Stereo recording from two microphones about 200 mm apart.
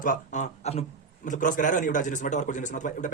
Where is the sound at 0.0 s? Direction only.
40° left (ahead or behind).